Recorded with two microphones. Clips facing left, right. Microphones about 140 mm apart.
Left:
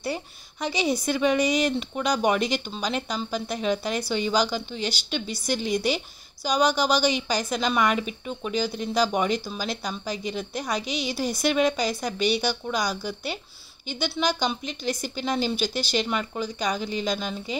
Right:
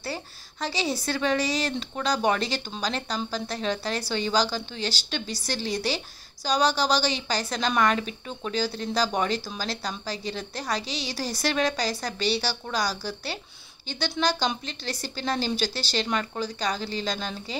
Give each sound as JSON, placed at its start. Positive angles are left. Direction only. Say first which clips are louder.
{"t": 0.0, "sound": "a woman's voice", "louder": "left 4 dB", "side_deg": 20}
{"t": 6.4, "sound": "a woman's voice", "louder": "left 1 dB", "side_deg": 10}